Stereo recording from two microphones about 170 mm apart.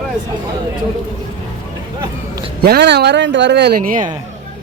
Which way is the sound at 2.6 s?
70° right (ahead or behind).